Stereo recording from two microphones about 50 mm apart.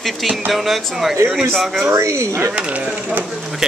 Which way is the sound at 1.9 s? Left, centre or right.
Right.